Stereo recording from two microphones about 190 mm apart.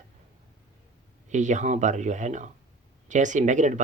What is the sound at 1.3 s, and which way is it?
Speech, 40° right (ahead or behind).